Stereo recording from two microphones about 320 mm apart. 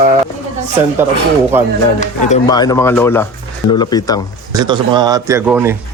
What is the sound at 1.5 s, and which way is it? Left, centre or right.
Speech, centre.